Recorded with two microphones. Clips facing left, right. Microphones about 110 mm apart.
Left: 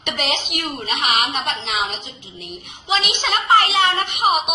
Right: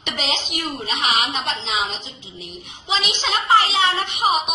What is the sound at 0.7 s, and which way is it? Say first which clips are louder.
A woman's voice: left 1 dB; 50° left (ahead or behind).